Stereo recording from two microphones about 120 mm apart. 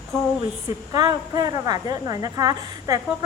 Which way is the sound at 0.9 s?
35° right (ahead or behind).